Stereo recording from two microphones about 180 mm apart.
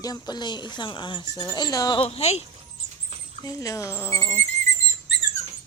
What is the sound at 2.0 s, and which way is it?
Speech, 35° left (ahead or behind).